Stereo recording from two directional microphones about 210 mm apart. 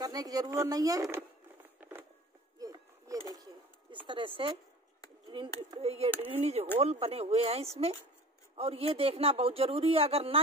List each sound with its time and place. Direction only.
0.0 s speech: 15° right (ahead or behind)
1.8 s a sound: 10° right (ahead or behind)
3.9 s speech: 25° right (ahead or behind)